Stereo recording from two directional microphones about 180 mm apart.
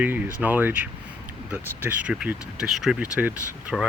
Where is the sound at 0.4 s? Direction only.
10° right (ahead or behind).